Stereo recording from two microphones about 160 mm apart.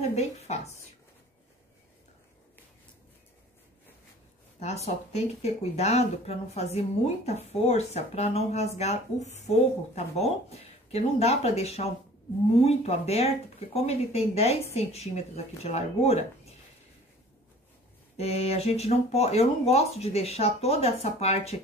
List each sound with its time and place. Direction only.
0.0 s a woman's voice: 40° left (ahead or behind)
4.6 s speech: 40° left (ahead or behind)
18.1 s speech: 40° left (ahead or behind)